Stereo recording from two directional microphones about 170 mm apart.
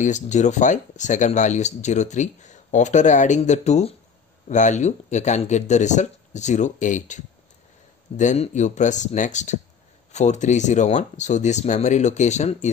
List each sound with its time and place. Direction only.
0.0 s speech: 45° left (ahead or behind)